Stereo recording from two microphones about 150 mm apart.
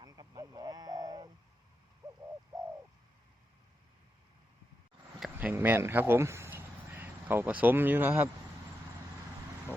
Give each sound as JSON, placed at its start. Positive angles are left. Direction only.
{"t": 0.0, "sound": "bird", "side_deg": -25}
{"t": 5.2, "sound": "speech", "side_deg": -10}